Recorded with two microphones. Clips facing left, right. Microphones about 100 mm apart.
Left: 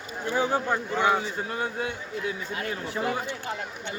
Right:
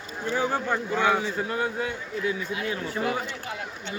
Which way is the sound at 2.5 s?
45° left (ahead or behind).